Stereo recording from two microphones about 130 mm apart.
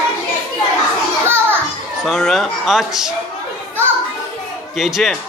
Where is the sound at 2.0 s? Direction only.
Centre (ahead or behind).